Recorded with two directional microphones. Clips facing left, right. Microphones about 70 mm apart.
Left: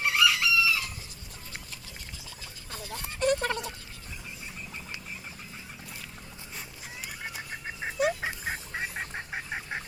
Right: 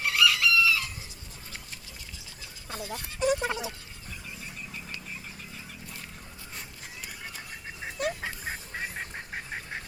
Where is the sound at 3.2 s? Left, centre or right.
Centre.